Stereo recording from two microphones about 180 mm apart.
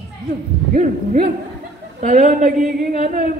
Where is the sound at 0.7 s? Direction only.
45° right (ahead or behind).